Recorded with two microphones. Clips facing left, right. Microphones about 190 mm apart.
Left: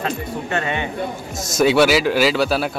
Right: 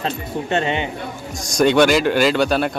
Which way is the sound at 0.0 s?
25° right (ahead or behind).